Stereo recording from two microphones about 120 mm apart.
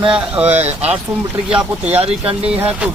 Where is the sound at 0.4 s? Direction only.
15° right (ahead or behind).